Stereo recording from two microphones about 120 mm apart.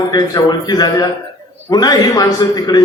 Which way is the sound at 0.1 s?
35° left (ahead or behind).